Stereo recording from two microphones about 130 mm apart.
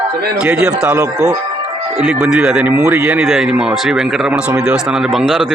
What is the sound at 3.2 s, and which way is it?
Speech, centre (ahead or behind).